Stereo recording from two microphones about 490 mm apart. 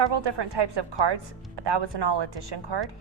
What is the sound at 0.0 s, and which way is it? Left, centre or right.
A woman's voice, right.